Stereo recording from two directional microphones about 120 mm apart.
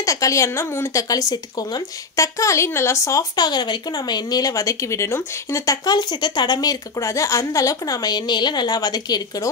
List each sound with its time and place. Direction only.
0.0 s speech: 30° left (ahead or behind)